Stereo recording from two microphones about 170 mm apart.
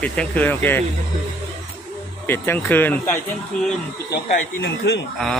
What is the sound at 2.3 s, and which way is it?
Speech, 10° left (ahead or behind).